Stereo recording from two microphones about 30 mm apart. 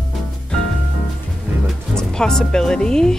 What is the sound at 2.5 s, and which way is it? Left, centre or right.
Speech, left.